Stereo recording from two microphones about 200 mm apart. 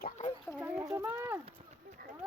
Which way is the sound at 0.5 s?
5° right (ahead or behind).